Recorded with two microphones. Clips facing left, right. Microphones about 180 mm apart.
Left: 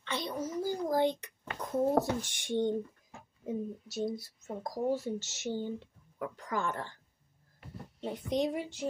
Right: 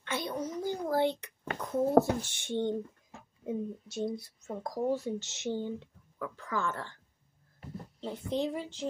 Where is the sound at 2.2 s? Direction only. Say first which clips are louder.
Left 1 dB; 15° left (ahead or behind).